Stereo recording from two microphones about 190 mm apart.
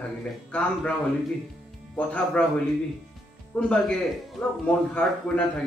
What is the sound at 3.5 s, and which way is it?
A man's voice, 10° left (ahead or behind).